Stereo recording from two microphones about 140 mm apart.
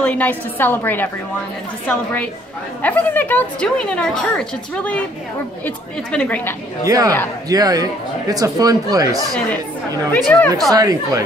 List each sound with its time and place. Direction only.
0.0 s a woman's voice: 10° left (ahead or behind)
2.8 s a woman's voice: 10° left (ahead or behind)
6.1 s a woman's voice: 10° left (ahead or behind)
6.9 s speech: 25° right (ahead or behind)
10.1 s a woman's voice: 10° left (ahead or behind)
10.7 s speech: 25° right (ahead or behind)